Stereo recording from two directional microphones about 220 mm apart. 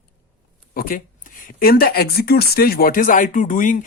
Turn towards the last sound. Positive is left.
turn(degrees=35)  # may be behind; listen again after turning